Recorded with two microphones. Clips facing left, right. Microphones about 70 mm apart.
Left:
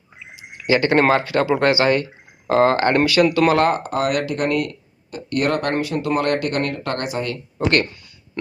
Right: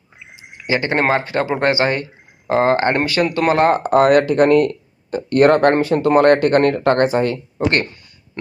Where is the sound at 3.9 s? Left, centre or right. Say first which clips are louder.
Right 9 dB; right.